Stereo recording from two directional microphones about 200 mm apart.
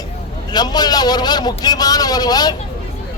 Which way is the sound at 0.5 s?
20° left (ahead or behind).